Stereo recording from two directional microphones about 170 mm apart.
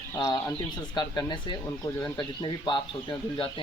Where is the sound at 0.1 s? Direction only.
20° left (ahead or behind).